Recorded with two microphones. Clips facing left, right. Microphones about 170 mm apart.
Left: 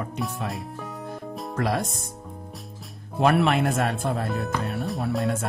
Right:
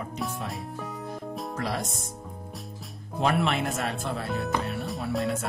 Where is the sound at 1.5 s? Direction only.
55° left (ahead or behind).